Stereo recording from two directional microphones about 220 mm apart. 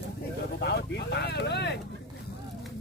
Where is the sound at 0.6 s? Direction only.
45° left (ahead or behind).